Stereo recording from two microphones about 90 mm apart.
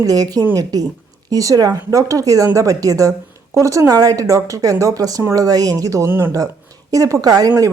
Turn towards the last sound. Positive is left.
turn(degrees=-40)  # may be behind; listen again after turning